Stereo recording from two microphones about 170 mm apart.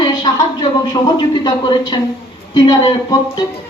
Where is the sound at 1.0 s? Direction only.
25° left (ahead or behind).